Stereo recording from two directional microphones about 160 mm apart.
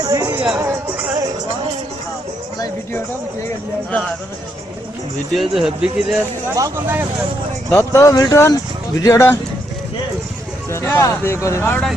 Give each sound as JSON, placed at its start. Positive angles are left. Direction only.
{"t": 0.0, "sound": "music", "side_deg": -25}
{"t": 0.3, "sound": "speech", "side_deg": -10}
{"t": 5.4, "sound": "speech", "side_deg": -5}
{"t": 6.6, "sound": "speech", "side_deg": -15}
{"t": 7.7, "sound": "speech", "side_deg": 20}
{"t": 10.7, "sound": "speech", "side_deg": 15}